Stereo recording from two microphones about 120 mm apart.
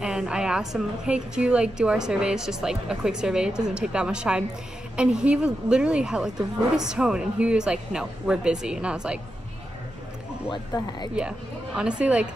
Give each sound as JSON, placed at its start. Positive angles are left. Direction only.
{"t": 0.0, "sound": "a woman's voice", "side_deg": -5}
{"t": 11.1, "sound": "a woman's voice", "side_deg": -10}